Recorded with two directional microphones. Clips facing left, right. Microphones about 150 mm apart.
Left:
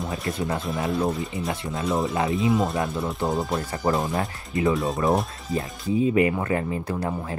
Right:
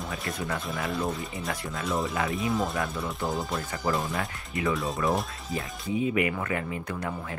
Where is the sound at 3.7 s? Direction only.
40° left (ahead or behind).